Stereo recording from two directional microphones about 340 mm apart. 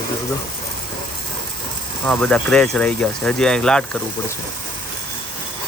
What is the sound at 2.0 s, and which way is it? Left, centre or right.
Speech, centre.